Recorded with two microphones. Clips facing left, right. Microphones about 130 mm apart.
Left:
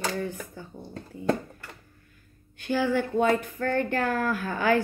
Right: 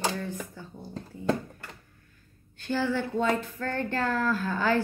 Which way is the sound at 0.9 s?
Centre (ahead or behind).